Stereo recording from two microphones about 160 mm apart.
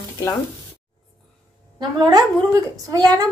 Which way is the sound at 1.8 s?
25° right (ahead or behind).